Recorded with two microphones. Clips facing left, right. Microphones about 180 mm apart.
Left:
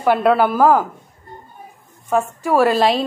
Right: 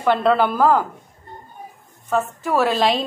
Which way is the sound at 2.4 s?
10° left (ahead or behind).